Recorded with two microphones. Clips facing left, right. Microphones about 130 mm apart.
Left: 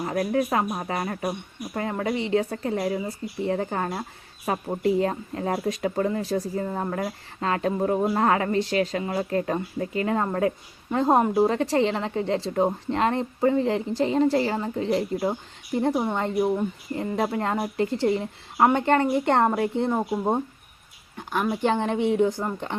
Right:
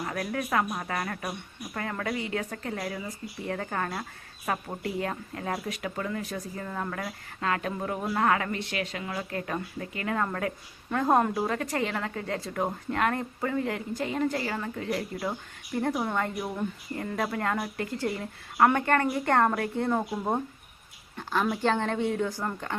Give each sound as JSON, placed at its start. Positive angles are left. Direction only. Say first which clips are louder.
{"t": 0.0, "sound": "speech", "louder": "left 7 dB", "side_deg": 30}